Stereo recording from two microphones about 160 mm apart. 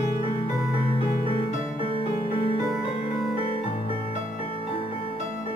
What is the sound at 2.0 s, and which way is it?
Music, 35° left (ahead or behind).